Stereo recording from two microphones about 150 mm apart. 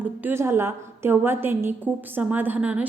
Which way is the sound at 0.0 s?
10° right (ahead or behind).